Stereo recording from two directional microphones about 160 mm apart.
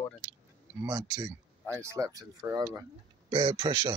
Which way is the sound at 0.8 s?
25° right (ahead or behind).